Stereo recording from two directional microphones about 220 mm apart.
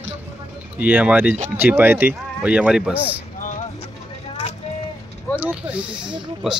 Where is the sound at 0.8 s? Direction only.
5° right (ahead or behind).